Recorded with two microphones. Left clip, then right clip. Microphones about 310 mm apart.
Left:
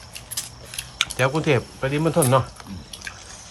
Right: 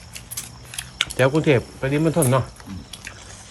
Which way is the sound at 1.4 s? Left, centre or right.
Centre.